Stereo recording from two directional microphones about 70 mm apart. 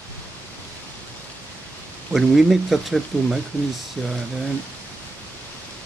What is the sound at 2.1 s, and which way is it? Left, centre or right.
Speech, centre.